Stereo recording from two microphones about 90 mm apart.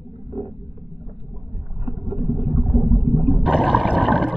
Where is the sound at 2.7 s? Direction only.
60° left (ahead or behind).